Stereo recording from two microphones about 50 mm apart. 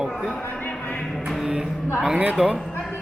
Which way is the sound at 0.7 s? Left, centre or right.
Left.